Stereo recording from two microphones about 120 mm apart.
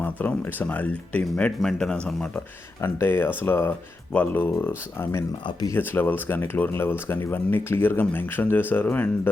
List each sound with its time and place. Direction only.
0.0 s speech: 15° left (ahead or behind)
2.8 s speech: 20° left (ahead or behind)
5.5 s speech: 35° left (ahead or behind)
5.7 s speech: 15° left (ahead or behind)